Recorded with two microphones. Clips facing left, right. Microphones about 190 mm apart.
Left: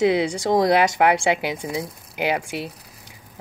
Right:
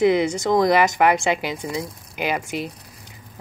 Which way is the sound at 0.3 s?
15° left (ahead or behind).